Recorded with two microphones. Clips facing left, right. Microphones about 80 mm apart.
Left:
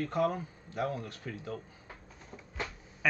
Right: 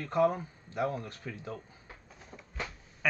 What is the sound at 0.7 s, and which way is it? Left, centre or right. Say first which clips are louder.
Speech: right 2 dB; right.